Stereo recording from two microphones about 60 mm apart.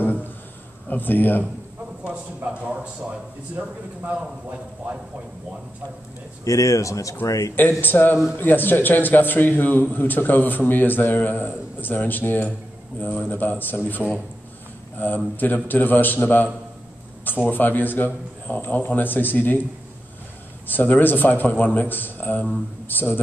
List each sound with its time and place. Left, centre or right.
0.0 s a sound: left
0.8 s a man's voice: left
2.0 s speech: centre
6.4 s speech: left
7.8 s a man's voice: left
20.6 s a man's voice: left